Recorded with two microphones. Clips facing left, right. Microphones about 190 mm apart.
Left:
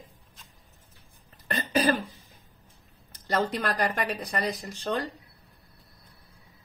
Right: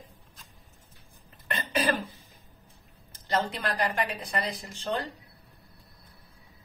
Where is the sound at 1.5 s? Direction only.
45° left (ahead or behind).